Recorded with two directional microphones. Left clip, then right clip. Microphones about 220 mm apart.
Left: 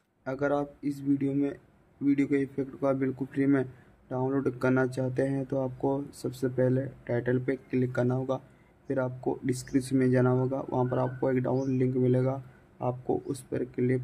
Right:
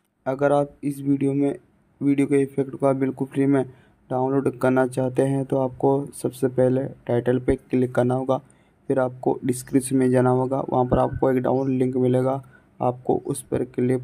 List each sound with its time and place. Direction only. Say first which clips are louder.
0.2 s speech: right 9 dB; 25° right (ahead or behind)